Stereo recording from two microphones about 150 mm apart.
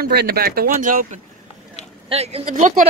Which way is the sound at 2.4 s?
55° right (ahead or behind).